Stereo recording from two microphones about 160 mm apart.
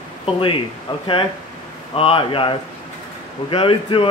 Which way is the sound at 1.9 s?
35° left (ahead or behind).